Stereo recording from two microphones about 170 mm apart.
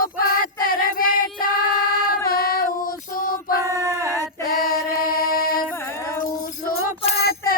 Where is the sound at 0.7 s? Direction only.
55° left (ahead or behind).